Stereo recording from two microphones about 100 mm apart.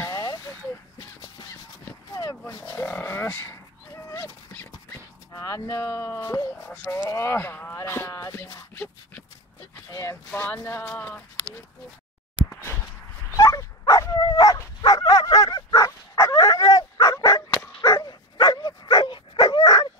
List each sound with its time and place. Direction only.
0.0 s a sound: 40° left (ahead or behind)
2.1 s pig: 35° left (ahead or behind)
2.9 s dog: 20° left (ahead or behind)
5.3 s speech: 35° left (ahead or behind)
8.7 s a sound: 20° left (ahead or behind)
9.8 s a sound: 35° left (ahead or behind)
10.3 s speech: 20° left (ahead or behind)
13.4 s dog: 35° left (ahead or behind)
14.8 s bow-wow: 45° left (ahead or behind)
17.9 s dog: 50° left (ahead or behind)